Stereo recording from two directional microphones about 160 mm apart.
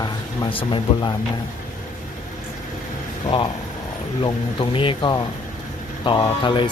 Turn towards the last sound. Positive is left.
turn(degrees=30)  # may be behind; listen again after turning